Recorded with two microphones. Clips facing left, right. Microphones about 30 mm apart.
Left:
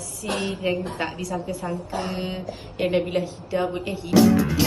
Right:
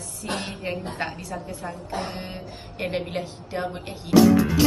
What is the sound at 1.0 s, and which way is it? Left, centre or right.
A woman's voice, left.